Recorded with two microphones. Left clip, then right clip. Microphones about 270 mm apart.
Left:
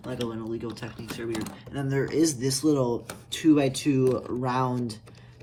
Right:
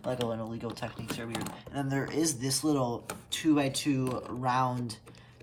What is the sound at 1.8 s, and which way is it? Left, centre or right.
Speech, centre.